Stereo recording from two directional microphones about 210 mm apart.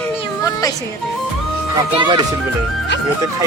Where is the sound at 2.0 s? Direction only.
20° right (ahead or behind).